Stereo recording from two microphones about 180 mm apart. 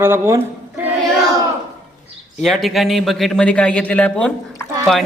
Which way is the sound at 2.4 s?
Centre (ahead or behind).